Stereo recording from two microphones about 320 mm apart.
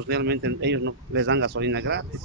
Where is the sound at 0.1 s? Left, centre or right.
Right.